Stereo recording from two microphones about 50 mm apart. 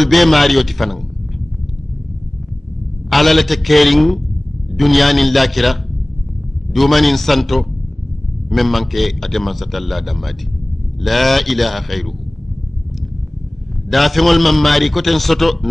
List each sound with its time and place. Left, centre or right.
0.0 s a man's voice: centre
3.1 s a man's voice: centre
13.8 s a man's voice: centre